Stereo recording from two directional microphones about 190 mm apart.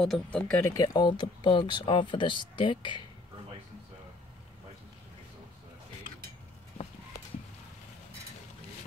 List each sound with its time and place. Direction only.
0.0 s speech: 5° left (ahead or behind); by 3.1 s 25° left (ahead or behind)